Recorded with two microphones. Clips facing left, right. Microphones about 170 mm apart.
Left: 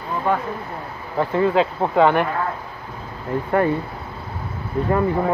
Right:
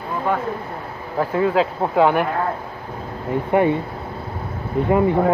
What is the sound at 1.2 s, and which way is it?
Speech, 5° right (ahead or behind).